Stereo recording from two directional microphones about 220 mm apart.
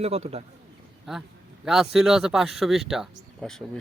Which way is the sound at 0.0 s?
25° right (ahead or behind).